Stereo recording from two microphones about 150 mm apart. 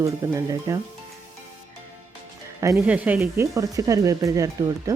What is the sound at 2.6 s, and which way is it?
Speech, 20° right (ahead or behind).